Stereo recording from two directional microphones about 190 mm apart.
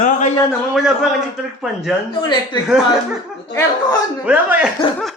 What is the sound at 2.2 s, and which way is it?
Speech, 20° left (ahead or behind).